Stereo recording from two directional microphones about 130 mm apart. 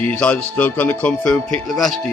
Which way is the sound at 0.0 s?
10° left (ahead or behind).